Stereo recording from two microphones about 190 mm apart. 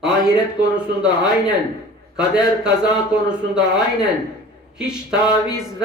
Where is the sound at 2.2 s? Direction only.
5° right (ahead or behind).